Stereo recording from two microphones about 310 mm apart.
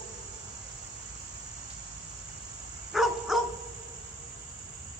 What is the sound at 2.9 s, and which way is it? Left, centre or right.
Dog, centre.